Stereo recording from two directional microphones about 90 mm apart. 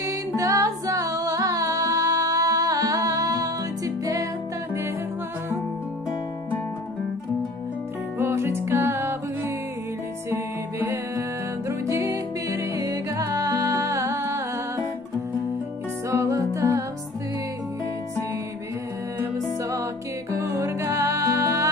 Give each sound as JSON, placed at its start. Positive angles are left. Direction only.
{"t": 0.0, "sound": "music", "side_deg": -40}
{"t": 8.2, "sound": "music", "side_deg": -30}
{"t": 10.3, "sound": "music", "side_deg": -25}
{"t": 16.1, "sound": "music", "side_deg": -35}
{"t": 20.3, "sound": "music", "side_deg": -35}